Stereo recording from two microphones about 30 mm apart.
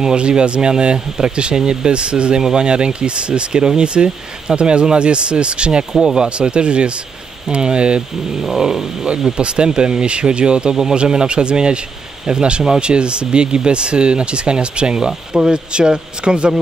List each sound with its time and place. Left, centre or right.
0.0 s speech: right
1.9 s speech: right
5.9 s speech: right
6.2 s speech: right
8.4 s a sound: centre
9.4 s speech: right
10.7 s speech: right
11.0 s speech: right